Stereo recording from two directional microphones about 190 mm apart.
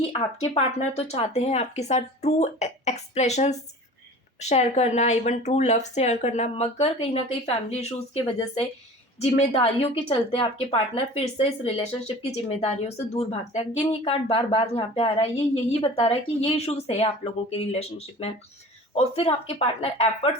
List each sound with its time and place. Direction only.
0.0 s speech: 35° left (ahead or behind)